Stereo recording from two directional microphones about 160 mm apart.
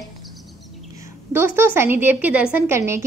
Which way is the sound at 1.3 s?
15° right (ahead or behind).